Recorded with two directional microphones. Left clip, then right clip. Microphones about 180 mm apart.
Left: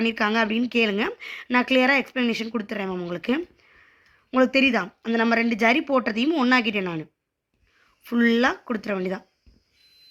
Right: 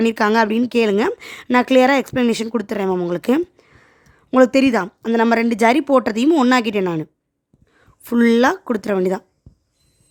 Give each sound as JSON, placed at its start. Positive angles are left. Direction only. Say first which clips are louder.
{"t": 0.0, "sound": "speech", "louder": "right 7 dB", "side_deg": -60}